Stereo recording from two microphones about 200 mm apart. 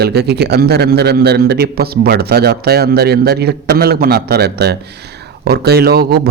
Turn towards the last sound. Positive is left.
turn(degrees=-50)  # may be behind; listen again after turning